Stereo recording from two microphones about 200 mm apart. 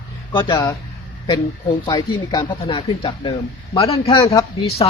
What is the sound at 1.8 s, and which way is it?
Speech, 20° left (ahead or behind).